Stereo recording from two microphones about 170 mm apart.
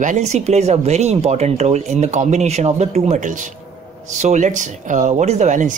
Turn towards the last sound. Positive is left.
turn(degrees=-50)  # may be behind; listen again after turning